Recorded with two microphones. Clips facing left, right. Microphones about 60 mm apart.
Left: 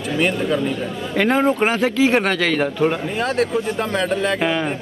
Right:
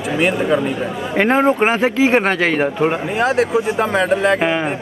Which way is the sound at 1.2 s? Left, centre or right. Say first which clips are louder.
Right 3 dB; right.